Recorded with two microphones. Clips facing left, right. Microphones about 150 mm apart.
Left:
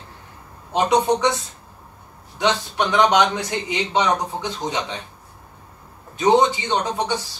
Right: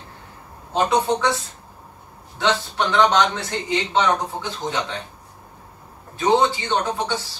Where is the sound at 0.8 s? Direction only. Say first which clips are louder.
Left 2 dB; 20° left (ahead or behind).